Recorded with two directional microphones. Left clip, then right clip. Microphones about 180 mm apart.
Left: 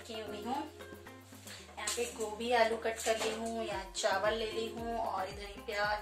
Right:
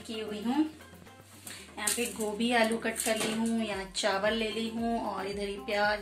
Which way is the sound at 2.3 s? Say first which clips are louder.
Right 2 dB; 10° right (ahead or behind).